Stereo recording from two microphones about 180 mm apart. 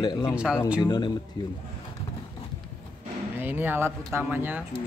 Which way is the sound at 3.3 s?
10° right (ahead or behind).